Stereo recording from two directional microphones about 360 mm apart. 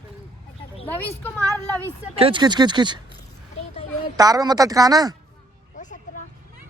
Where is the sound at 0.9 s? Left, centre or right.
Centre.